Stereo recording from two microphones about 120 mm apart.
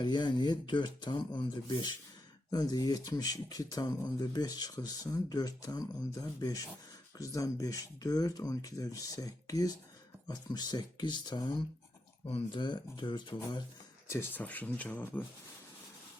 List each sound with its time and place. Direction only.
0.0 s speech: 40° left (ahead or behind)
14.1 s speech: 15° left (ahead or behind)